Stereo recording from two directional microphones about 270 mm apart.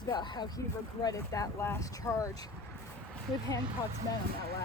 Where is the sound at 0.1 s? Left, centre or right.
Centre.